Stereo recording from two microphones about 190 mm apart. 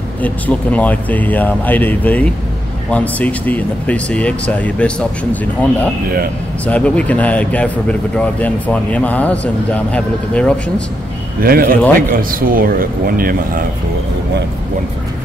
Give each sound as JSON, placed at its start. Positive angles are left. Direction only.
{"t": 0.2, "sound": "speech", "side_deg": 5}
{"t": 11.4, "sound": "speech", "side_deg": -50}